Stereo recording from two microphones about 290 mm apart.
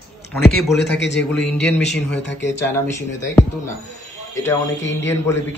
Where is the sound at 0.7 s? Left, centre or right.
Left.